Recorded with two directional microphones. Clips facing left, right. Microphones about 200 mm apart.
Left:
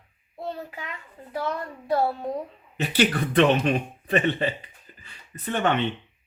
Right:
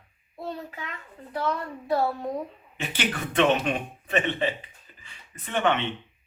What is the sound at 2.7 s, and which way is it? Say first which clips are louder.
A man's voice: left 7 dB; 40° left (ahead or behind).